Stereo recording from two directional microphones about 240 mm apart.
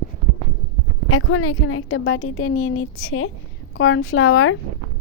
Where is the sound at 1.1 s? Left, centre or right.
Left.